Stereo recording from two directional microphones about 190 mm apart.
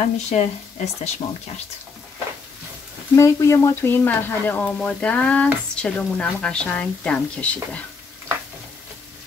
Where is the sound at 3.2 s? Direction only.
15° left (ahead or behind).